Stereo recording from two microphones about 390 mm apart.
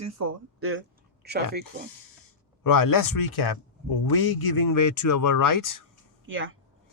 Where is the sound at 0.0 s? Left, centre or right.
Right.